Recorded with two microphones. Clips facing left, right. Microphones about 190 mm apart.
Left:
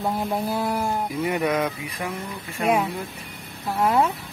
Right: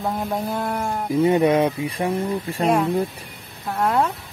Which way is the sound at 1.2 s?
30° right (ahead or behind).